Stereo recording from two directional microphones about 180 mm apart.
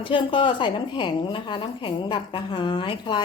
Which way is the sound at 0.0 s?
30° left (ahead or behind).